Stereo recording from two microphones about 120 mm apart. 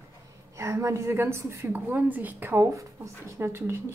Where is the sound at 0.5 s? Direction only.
25° right (ahead or behind).